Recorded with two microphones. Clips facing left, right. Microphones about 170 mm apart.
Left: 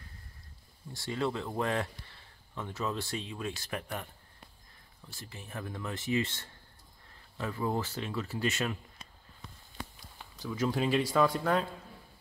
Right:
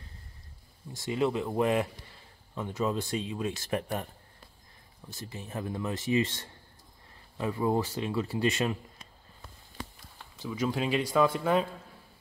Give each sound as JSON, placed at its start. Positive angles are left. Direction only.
{"t": 0.9, "sound": "speech", "side_deg": -20}
{"t": 5.1, "sound": "speech", "side_deg": -20}
{"t": 8.4, "sound": "speech", "side_deg": -30}
{"t": 10.4, "sound": "speech", "side_deg": 0}